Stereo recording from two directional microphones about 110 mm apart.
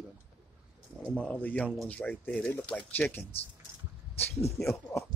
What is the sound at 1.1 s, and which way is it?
Speech, 10° left (ahead or behind).